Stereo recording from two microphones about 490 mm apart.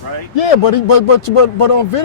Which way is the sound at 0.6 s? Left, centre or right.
Left.